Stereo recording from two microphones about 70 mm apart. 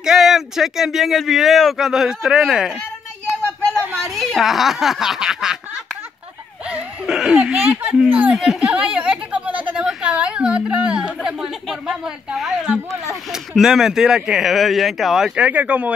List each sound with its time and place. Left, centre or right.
0.0 s speech: centre
3.7 s a sound: right
4.1 s speech: centre
7.1 s a woman's voice: centre
8.3 s a sound: centre
9.8 s a woman's voice: centre
15.3 s speech: right